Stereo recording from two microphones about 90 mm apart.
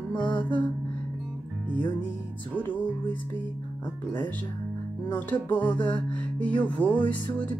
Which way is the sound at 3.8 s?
60° left (ahead or behind).